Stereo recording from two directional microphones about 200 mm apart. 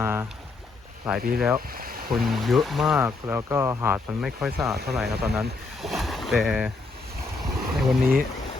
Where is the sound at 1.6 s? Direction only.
50° right (ahead or behind).